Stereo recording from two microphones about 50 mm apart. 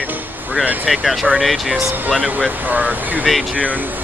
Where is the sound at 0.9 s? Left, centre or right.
Centre.